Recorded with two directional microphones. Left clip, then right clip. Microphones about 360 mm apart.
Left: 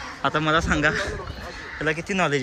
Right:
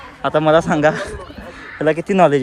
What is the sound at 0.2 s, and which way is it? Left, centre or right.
A man's voice, centre.